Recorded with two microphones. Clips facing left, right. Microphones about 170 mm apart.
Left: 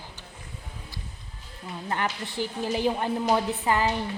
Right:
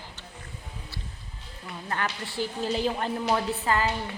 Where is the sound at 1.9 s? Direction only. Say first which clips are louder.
Left 2 dB; 20° left (ahead or behind).